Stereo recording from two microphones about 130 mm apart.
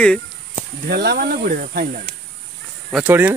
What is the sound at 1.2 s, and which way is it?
Speech, 90° right.